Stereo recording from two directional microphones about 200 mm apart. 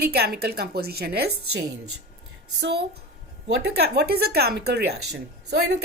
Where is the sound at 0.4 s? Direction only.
50° right (ahead or behind).